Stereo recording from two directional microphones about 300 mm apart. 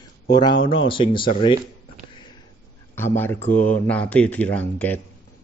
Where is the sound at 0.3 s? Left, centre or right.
Centre.